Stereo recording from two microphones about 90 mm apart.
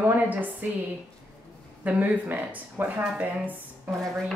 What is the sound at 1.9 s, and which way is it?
Speech, 20° right (ahead or behind).